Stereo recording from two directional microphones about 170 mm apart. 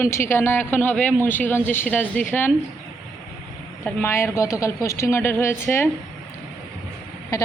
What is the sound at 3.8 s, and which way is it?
A woman's voice, 15° left (ahead or behind).